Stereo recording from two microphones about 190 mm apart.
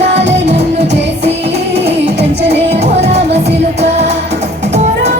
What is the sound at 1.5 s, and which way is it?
Music, 65° right (ahead or behind).